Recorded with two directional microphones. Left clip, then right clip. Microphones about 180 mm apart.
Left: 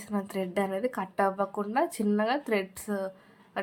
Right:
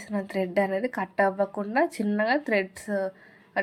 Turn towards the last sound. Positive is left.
turn(degrees=0)  # may be behind; listen again after turning